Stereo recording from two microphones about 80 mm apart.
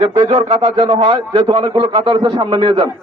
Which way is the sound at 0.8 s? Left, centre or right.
Right.